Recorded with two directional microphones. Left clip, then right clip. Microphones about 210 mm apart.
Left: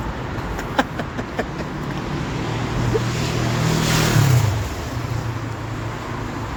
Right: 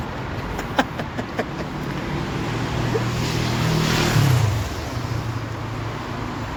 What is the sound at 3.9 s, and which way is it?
Vehicle, 50° left (ahead or behind).